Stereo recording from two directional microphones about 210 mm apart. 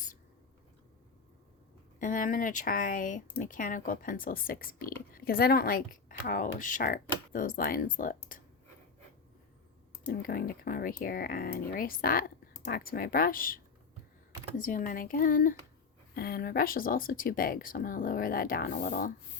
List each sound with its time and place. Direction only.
2.0 s speech: 40° left (ahead or behind)
10.1 s speech: 45° left (ahead or behind)
14.6 s speech: 40° left (ahead or behind)